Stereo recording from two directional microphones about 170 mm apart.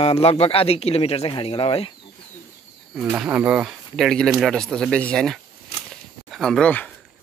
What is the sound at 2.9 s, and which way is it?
Speech, 10° right (ahead or behind).